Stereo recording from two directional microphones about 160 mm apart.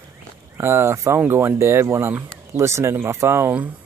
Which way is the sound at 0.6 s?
15° right (ahead or behind).